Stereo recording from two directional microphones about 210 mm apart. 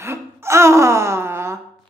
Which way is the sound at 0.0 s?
10° right (ahead or behind).